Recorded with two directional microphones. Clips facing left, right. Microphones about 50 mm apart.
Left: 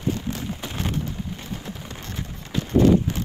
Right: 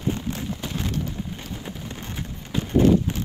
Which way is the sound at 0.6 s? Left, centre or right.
Left.